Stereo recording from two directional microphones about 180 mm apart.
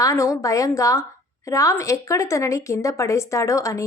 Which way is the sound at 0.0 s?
15° left (ahead or behind).